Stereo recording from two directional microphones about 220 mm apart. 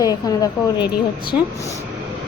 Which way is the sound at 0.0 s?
15° left (ahead or behind).